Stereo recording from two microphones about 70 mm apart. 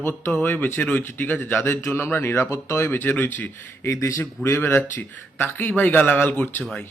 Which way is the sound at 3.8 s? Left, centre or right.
Left.